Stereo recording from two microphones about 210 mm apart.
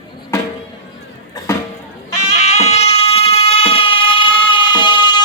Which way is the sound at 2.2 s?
30° left (ahead or behind).